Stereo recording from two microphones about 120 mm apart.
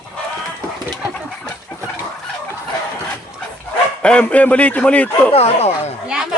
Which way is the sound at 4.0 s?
10° left (ahead or behind).